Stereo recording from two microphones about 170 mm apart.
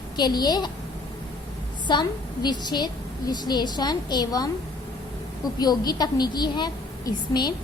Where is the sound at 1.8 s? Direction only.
25° left (ahead or behind).